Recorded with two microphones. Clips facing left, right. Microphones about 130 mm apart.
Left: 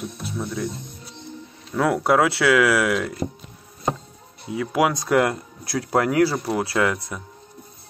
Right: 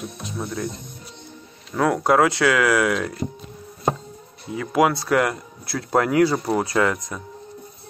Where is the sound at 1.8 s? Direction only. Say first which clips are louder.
Right 1 dB; 5° left (ahead or behind).